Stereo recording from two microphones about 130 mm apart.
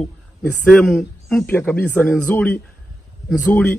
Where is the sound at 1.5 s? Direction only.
15° left (ahead or behind).